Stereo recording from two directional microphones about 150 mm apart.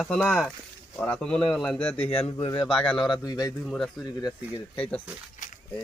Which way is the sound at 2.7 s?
5° left (ahead or behind).